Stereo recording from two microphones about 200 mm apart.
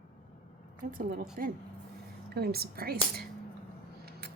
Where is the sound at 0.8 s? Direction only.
45° right (ahead or behind).